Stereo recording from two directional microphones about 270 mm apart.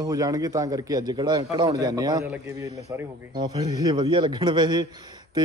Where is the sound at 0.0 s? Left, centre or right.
Centre.